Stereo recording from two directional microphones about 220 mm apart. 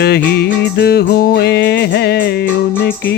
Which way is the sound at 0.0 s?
45° left (ahead or behind).